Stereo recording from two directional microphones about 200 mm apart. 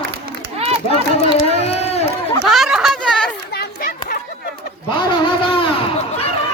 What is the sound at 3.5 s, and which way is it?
Chatter, 45° left (ahead or behind).